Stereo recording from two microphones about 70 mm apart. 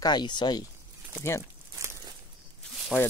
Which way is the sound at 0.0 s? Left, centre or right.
Left.